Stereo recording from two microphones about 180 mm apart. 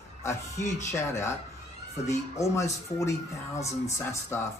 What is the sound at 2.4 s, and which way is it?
Speech, 15° left (ahead or behind).